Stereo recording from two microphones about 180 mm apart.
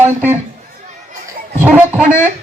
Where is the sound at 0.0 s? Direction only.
10° right (ahead or behind).